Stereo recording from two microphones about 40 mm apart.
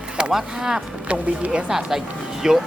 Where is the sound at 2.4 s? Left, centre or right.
Centre.